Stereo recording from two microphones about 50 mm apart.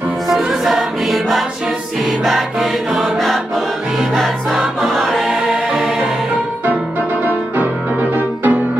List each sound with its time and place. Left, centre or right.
0.3 s music: centre
3.2 s choir: centre
4.1 s music: centre
5.2 s music: centre
7.2 s music: right